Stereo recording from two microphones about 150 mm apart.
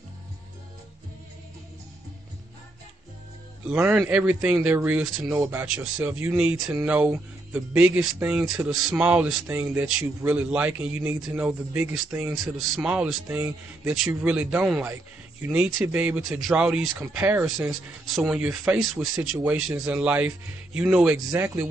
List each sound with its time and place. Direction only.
3.6 s speech: 10° right (ahead or behind)